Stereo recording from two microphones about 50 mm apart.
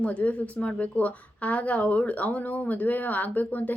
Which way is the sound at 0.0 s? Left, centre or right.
Left.